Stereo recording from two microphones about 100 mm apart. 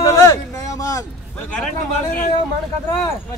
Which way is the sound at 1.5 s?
5° left (ahead or behind).